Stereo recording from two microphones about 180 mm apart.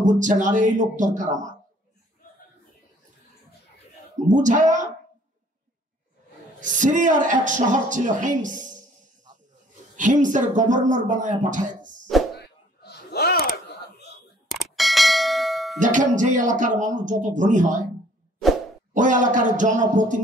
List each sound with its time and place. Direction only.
0.0 s speech: 45° right (ahead or behind)
4.3 s speech: 45° right (ahead or behind)
6.6 s speech: 45° right (ahead or behind)
9.9 s speech: 45° right (ahead or behind)
12.4 s a sound: 65° left (ahead or behind)
14.5 s bell: centre (ahead or behind)
15.8 s speech: 45° right (ahead or behind)
18.9 s speech: 45° right (ahead or behind)